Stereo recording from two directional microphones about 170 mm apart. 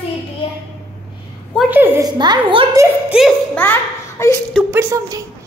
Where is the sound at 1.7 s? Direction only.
10° right (ahead or behind).